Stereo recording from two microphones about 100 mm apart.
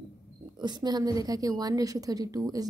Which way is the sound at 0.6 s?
45° right (ahead or behind).